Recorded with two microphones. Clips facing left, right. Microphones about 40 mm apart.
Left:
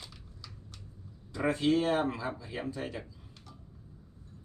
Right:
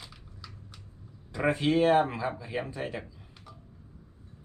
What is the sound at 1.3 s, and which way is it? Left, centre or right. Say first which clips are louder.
Speech: right 2 dB; right.